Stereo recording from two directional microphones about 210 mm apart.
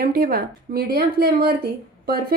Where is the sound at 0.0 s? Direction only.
45° right (ahead or behind).